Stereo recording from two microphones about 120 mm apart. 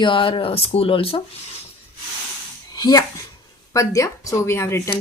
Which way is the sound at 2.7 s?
30° left (ahead or behind).